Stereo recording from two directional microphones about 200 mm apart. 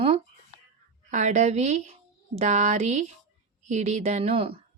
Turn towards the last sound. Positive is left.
turn(degrees=-30)  # may be behind; listen again after turning